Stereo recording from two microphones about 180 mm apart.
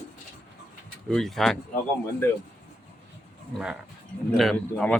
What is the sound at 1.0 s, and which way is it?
Speech, centre (ahead or behind).